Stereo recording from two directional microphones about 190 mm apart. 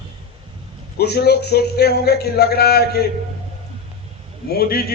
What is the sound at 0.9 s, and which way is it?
A man's voice, 60° left (ahead or behind).